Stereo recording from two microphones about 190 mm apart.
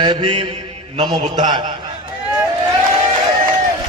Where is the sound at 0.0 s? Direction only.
25° right (ahead or behind).